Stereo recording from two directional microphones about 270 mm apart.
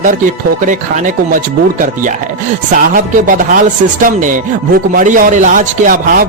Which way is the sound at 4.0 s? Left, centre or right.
Right.